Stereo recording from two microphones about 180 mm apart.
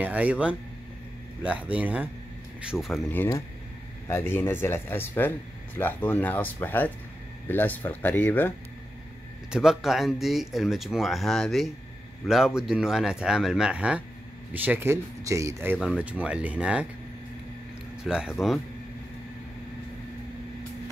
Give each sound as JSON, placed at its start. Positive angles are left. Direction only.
{"t": 0.0, "sound": "speech", "side_deg": -5}
{"t": 3.0, "sound": "speech", "side_deg": 15}
{"t": 9.5, "sound": "speech", "side_deg": 0}
{"t": 18.0, "sound": "speech", "side_deg": -5}